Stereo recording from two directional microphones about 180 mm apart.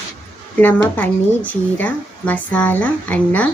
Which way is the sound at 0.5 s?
10° left (ahead or behind).